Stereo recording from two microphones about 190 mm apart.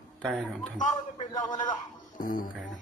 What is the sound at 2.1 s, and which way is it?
Music, 45° left (ahead or behind).